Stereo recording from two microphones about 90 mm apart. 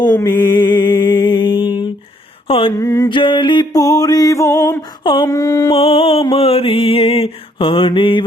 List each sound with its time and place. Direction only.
0.3 s music: 50° left (ahead or behind)
2.5 s mantra: 90° left
2.7 s music: 35° left (ahead or behind)
3.1 s a sound: 65° left (ahead or behind)
3.7 s music: 40° left (ahead or behind)
5.7 s mantra: 90° left; by 8.2 s 70° left (ahead or behind)